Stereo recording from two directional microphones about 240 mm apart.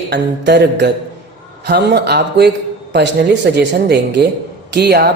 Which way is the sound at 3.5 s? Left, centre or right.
Right.